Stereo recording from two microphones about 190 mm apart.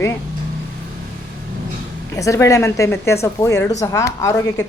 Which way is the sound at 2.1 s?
15° left (ahead or behind).